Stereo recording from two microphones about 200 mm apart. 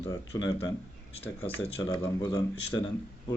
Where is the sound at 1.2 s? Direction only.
30° left (ahead or behind).